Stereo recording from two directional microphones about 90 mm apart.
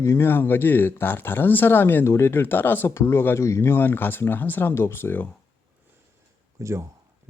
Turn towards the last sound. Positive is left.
turn(degrees=-35)  # may be behind; listen again after turning